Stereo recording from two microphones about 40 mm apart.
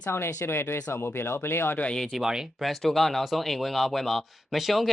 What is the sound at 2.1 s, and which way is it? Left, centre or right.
Speech, centre.